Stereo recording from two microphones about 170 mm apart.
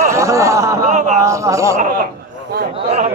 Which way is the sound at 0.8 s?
45° right (ahead or behind).